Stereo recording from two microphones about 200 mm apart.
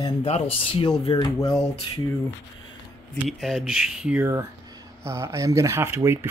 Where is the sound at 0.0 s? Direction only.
30° left (ahead or behind).